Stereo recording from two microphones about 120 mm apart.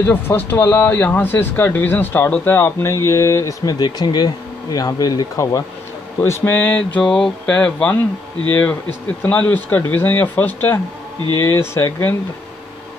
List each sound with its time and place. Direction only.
0.0 s speech: 20° left (ahead or behind)
9.2 s speech: 15° left (ahead or behind)